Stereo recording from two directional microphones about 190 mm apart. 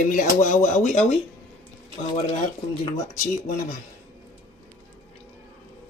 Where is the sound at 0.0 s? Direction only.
45° left (ahead or behind).